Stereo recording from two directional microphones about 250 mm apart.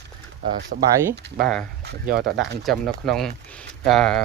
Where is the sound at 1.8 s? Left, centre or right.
Right.